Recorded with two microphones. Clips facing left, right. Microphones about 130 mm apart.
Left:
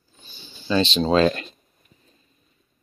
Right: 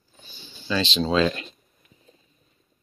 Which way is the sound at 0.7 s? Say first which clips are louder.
Left 4 dB; 45° left (ahead or behind).